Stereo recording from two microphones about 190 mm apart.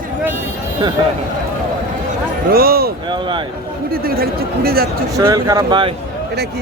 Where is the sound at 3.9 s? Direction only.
50° right (ahead or behind).